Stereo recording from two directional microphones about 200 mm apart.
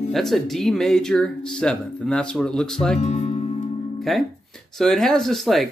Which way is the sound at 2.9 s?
35° left (ahead or behind).